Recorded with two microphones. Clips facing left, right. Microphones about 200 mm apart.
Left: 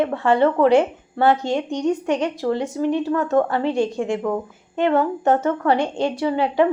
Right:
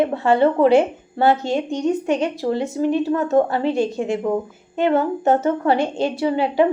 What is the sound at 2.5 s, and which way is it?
A woman's voice, 10° right (ahead or behind).